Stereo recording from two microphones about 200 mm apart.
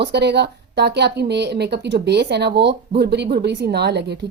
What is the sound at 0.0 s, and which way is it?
A woman's voice, 55° right (ahead or behind).